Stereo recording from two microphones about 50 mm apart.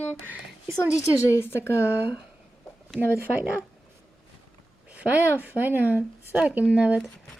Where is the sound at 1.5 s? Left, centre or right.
Left.